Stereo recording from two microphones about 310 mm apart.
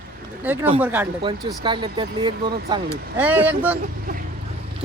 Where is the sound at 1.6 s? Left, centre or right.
Centre.